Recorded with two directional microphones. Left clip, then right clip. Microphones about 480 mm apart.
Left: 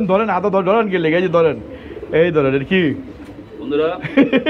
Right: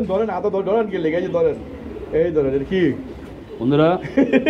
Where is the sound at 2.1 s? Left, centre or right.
Left.